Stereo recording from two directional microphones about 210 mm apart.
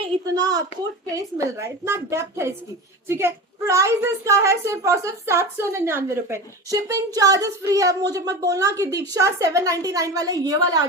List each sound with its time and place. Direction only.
0.0 s a woman's voice: 20° right (ahead or behind)